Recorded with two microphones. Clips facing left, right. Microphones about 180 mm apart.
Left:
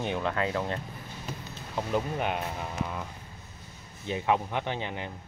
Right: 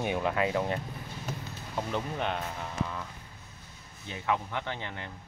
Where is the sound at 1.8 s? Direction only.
10° left (ahead or behind).